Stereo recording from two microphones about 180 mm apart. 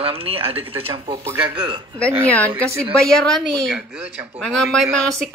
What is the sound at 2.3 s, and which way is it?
Speech, 10° left (ahead or behind).